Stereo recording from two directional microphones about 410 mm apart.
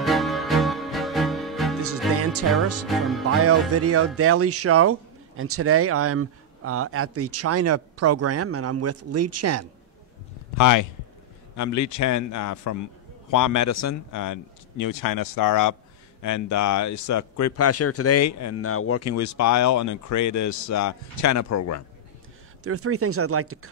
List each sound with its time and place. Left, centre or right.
0.0 s music: centre
1.8 s music: right
2.9 s music: centre
3.3 s speech: right
10.6 s a man's voice: left
22.6 s speech: right